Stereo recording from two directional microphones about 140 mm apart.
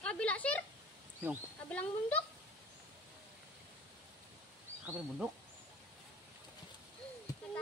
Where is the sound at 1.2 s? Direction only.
15° right (ahead or behind).